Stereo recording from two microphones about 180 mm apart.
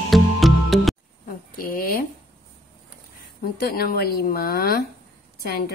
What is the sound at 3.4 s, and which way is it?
A woman's voice, 55° left (ahead or behind).